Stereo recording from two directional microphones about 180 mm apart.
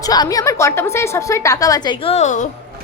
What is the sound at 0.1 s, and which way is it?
A woman's voice, 20° left (ahead or behind).